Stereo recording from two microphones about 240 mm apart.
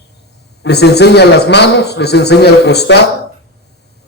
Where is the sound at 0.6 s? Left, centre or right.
Left.